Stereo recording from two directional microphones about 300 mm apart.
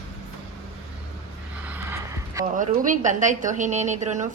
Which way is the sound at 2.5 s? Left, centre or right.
Right.